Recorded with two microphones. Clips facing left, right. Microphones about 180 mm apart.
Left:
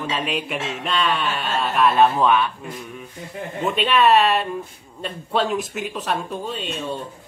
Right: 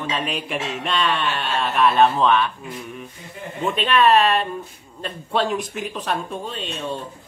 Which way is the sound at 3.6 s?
5° left (ahead or behind).